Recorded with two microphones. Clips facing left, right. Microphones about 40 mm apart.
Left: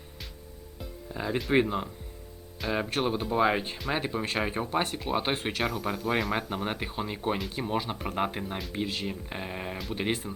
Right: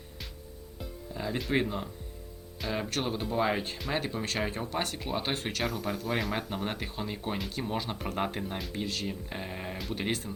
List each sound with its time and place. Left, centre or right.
1.1 s speech: centre
2.6 s speech: centre
3.8 s speech: centre
4.0 s speech: centre
5.6 s speech: centre
8.7 s speech: left